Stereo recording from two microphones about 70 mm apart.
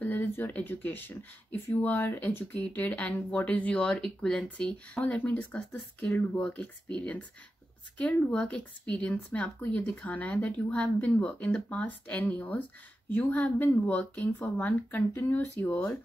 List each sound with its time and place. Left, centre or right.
0.0 s speech: left